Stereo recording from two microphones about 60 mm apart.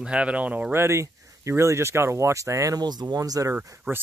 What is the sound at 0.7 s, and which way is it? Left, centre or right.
Speech, right.